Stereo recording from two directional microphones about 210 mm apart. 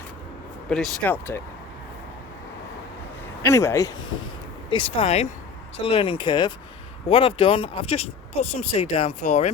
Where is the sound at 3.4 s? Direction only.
15° left (ahead or behind); by 9.5 s 35° left (ahead or behind).